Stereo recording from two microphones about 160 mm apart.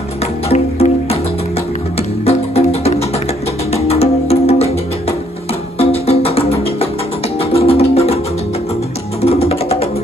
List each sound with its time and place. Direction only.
0.5 s music: 40° left (ahead or behind)
2.2 s music: 40° left (ahead or behind)
5.8 s music: 40° left (ahead or behind)
9.2 s music: 40° left (ahead or behind)